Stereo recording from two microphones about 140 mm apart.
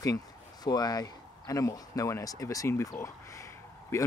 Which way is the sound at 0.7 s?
30° left (ahead or behind).